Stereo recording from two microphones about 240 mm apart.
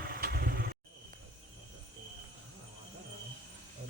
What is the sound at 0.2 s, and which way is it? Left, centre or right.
Vehicle, right.